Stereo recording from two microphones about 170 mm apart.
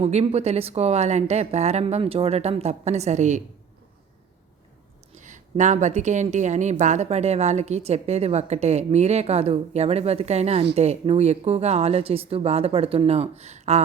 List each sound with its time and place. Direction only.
0.0 s a woman's voice: 40° right (ahead or behind)
5.1 s a woman's voice: 45° right (ahead or behind)